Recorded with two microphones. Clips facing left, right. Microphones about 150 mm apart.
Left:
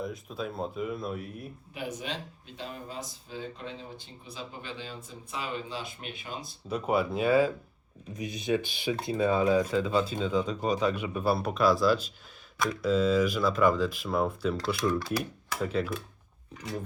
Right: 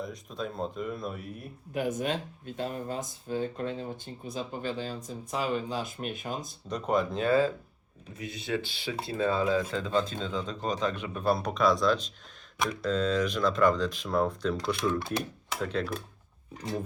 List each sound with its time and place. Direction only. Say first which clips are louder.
0.0 s speech: left 1 dB; 5° left (ahead or behind)
1.7 s speech: right 7 dB; 50° right (ahead or behind)
6.7 s speech: left 1 dB; 5° left (ahead or behind)
14.9 s speech: left 1 dB; 25° right (ahead or behind)
15.6 s speech: left 1 dB; 5° left (ahead or behind)